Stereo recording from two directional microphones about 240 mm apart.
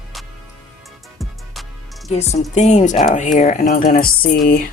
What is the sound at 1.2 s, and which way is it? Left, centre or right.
Music, centre.